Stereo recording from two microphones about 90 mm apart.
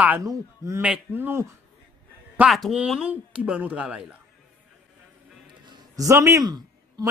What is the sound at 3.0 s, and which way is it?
Speech, 15° right (ahead or behind).